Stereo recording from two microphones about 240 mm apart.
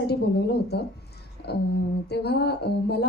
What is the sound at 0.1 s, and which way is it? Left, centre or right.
Speech, left.